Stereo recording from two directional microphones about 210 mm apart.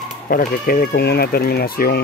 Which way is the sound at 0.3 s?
45° left (ahead or behind).